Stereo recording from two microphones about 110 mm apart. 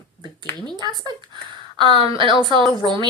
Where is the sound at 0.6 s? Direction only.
40° right (ahead or behind).